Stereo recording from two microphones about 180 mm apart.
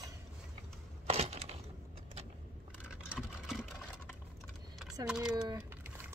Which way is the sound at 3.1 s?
5° right (ahead or behind).